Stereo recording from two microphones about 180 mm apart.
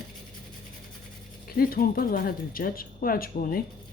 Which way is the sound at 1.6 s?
55° left (ahead or behind).